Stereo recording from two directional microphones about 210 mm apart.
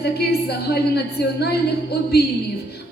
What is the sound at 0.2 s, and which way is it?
A woman's voice, 50° left (ahead or behind).